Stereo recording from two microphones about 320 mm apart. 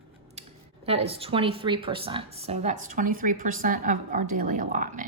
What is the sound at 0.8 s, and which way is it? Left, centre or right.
Speech, centre.